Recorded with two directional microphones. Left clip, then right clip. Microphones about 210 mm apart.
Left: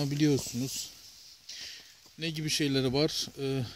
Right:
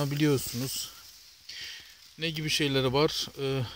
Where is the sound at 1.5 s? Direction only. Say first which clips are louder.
Right 3 dB; 5° left (ahead or behind).